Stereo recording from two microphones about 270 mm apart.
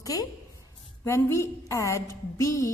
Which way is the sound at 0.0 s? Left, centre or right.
Centre.